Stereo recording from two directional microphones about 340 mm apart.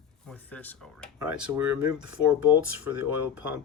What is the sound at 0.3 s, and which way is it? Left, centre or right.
Speech, centre.